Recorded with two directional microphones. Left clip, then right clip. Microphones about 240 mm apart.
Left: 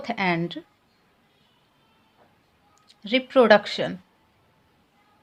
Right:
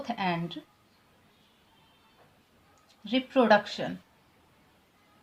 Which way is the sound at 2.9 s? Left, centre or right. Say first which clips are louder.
Left 7 dB; left.